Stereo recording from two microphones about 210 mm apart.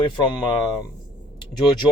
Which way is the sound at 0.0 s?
20° left (ahead or behind).